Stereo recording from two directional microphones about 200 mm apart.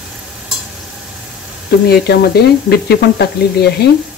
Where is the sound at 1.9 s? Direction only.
55° left (ahead or behind).